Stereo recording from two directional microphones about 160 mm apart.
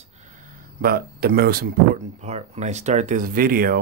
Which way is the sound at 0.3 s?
70° right (ahead or behind).